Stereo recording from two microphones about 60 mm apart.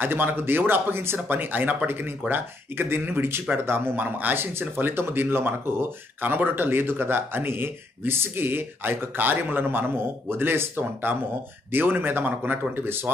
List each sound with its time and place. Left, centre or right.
0.0 s speech: right